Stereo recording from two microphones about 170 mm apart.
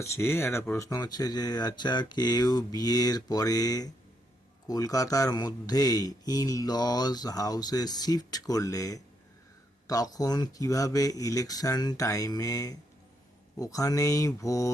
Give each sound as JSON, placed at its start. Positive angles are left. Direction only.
{"t": 0.0, "sound": "speech", "side_deg": 15}